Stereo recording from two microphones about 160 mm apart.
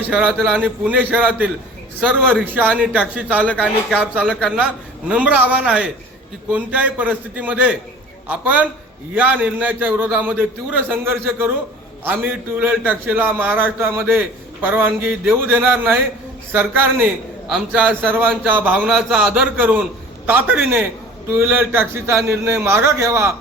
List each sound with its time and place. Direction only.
0.3 s speech: 5° left (ahead or behind)
0.6 s a man's voice: 10° right (ahead or behind)
2.5 s a man's voice: 10° right (ahead or behind); by 4.4 s 5° left (ahead or behind)
4.4 s a man's voice: 5° right (ahead or behind)